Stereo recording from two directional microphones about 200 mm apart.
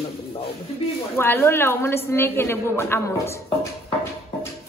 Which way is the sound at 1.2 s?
10° left (ahead or behind).